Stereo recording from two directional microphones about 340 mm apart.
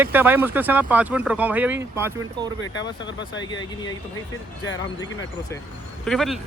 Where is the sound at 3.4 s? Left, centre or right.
Centre.